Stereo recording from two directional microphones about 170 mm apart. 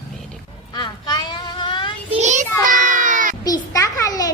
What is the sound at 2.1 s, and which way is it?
Speech, 40° right (ahead or behind).